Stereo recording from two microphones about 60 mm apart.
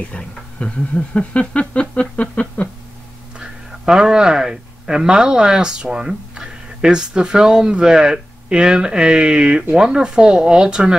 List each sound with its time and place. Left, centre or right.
0.1 s speech: centre
3.3 s speech: centre